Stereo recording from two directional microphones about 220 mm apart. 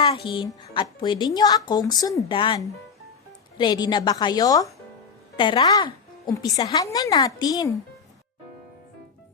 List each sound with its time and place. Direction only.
0.0 s a woman's voice: 25° left (ahead or behind)